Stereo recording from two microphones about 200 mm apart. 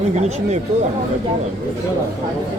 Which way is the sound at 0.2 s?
35° right (ahead or behind).